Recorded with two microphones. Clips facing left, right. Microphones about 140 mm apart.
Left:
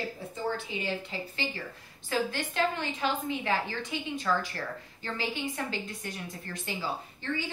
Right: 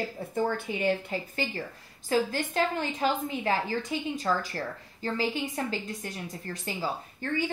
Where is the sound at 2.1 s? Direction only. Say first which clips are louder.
Right 4 dB; 40° right (ahead or behind).